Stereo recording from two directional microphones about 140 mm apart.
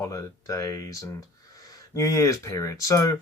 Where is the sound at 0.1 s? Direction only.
25° left (ahead or behind).